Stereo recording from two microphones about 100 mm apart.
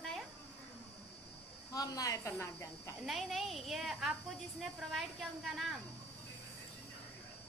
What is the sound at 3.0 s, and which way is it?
A woman's voice, centre (ahead or behind).